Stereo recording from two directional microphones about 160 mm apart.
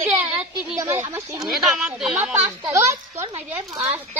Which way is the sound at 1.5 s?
5° right (ahead or behind).